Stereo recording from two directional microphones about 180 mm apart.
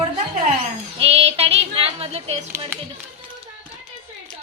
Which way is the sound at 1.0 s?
30° right (ahead or behind).